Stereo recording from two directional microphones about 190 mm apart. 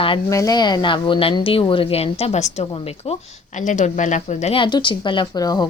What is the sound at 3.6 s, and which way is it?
Speech, 40° left (ahead or behind).